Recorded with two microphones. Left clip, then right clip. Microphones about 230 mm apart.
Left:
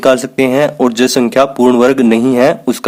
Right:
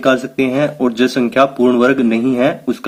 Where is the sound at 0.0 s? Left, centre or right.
Left.